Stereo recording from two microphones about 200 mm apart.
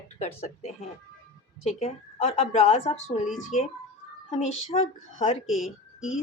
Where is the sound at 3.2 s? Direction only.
Centre (ahead or behind).